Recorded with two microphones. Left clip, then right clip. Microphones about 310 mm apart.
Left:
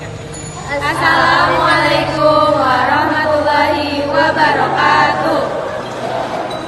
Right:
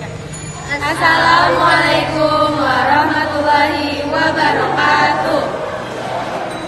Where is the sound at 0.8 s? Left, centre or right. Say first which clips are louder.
Even; centre.